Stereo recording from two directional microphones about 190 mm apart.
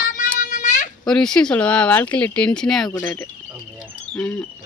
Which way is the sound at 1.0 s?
5° left (ahead or behind).